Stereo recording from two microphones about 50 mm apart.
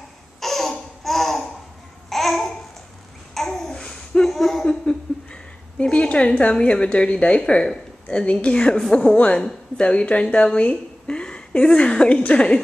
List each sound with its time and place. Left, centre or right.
0.4 s laughter: centre
2.0 s babbling: centre
3.6 s babbling: centre
4.3 s a sound: centre
4.6 s a woman's voice: centre